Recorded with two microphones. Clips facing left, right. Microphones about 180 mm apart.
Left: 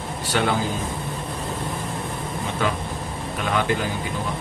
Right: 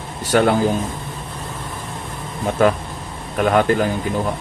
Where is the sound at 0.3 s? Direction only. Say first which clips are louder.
Right 7 dB; 50° right (ahead or behind).